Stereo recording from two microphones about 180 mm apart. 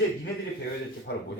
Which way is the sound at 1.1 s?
70° left (ahead or behind).